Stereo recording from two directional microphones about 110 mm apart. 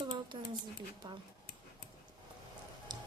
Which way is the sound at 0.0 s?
45° right (ahead or behind).